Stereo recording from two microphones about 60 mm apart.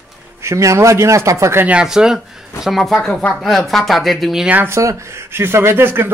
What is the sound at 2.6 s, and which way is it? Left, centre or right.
Speech, centre.